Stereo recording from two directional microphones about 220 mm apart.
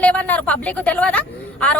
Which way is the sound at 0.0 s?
5° left (ahead or behind).